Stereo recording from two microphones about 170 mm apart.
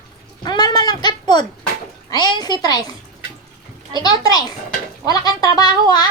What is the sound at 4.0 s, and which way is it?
A woman's voice, 25° left (ahead or behind).